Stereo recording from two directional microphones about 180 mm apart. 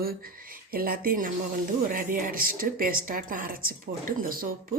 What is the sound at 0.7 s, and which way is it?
Speech, 55° right (ahead or behind).